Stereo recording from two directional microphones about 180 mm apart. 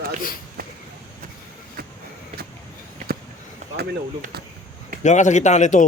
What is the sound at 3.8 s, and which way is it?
Speech, 60° right (ahead or behind).